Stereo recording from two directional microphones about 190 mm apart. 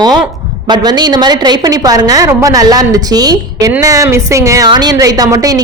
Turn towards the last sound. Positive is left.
turn(degrees=-20)  # may be behind; listen again after turning